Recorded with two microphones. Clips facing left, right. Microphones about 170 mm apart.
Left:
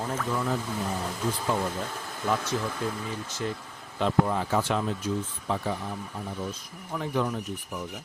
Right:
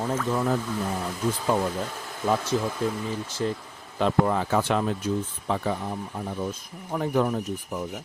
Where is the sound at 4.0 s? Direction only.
65° right (ahead or behind).